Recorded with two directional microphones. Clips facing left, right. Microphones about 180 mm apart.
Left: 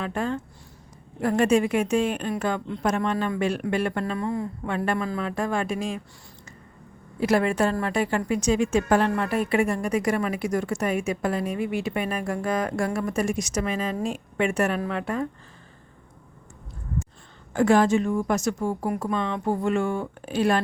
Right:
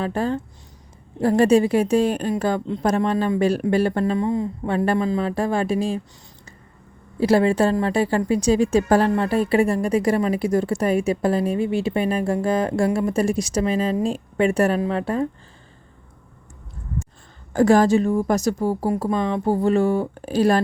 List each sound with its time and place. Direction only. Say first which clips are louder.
0.0 s a woman's voice: right 4 dB; 35° right (ahead or behind)
4.2 s a woman's voice: right 5 dB; 20° right (ahead or behind)
7.2 s a woman's voice: right 5 dB; 30° right (ahead or behind)
17.5 s a woman's voice: right 4 dB; 40° right (ahead or behind)